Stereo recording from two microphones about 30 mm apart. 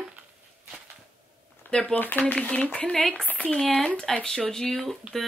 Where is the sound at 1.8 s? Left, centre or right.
Left.